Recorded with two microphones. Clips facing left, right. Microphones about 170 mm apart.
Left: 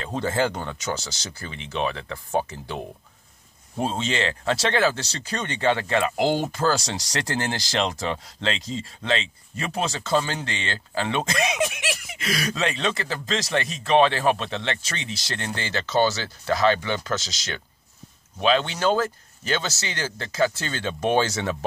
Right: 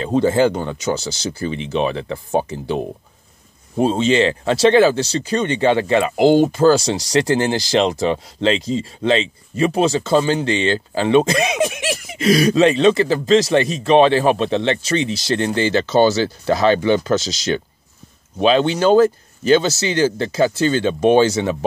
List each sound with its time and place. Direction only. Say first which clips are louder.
0.0 s speech: right 9 dB; 20° right (ahead or behind)